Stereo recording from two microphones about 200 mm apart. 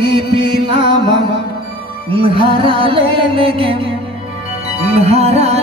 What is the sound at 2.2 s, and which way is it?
Music, 25° right (ahead or behind).